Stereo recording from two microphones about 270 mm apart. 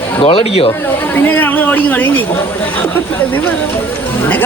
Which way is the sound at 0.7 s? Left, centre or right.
Centre.